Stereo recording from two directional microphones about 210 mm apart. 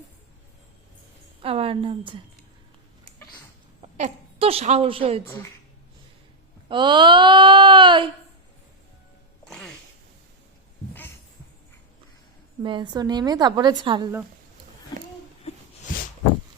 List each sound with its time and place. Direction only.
1.4 s a sound: 25° right (ahead or behind)
3.9 s a woman's voice: 30° right (ahead or behind)
6.7 s a woman's voice: 20° right (ahead or behind)
9.4 s music: centre (ahead or behind)
12.6 s a woman's voice: 20° right (ahead or behind)